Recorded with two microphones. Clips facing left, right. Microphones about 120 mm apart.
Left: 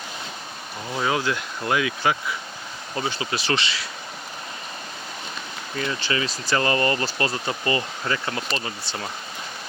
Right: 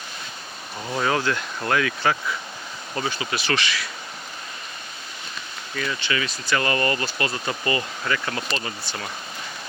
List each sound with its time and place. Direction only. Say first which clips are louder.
1.0 s speech: even; 10° left (ahead or behind)
2.9 s speech: even; 25° left (ahead or behind)
5.7 s speech: left 1 dB; 30° left (ahead or behind)